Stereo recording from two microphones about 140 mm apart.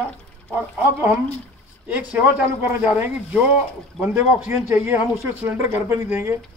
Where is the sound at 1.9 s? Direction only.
10° right (ahead or behind).